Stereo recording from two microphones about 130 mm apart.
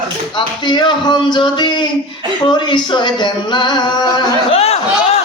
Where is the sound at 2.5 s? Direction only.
35° left (ahead or behind).